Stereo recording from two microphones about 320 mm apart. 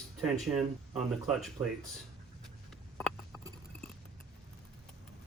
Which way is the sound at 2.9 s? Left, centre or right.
Centre.